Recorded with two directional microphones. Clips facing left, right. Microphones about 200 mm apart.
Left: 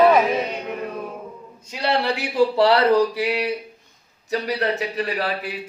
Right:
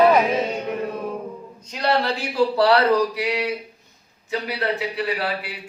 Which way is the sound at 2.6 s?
25° left (ahead or behind).